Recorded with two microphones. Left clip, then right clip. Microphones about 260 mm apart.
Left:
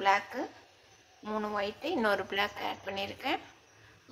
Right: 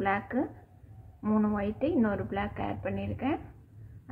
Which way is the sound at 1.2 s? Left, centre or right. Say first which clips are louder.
Right 2 dB; centre.